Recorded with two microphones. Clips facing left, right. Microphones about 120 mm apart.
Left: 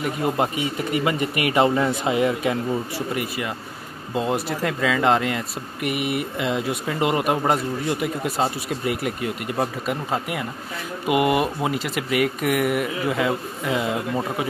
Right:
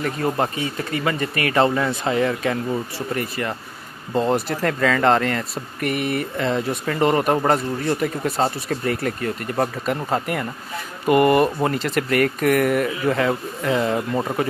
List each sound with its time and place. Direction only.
0.0 s speech: 15° left (ahead or behind)